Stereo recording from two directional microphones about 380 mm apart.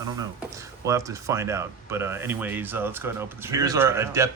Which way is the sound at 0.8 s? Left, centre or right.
Centre.